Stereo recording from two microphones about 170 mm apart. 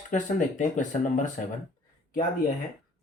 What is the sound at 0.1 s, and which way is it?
Speech, 50° left (ahead or behind).